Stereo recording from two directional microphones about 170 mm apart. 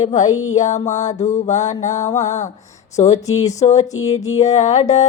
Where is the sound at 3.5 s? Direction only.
40° left (ahead or behind).